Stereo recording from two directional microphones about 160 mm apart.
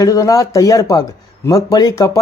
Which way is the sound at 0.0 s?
20° left (ahead or behind).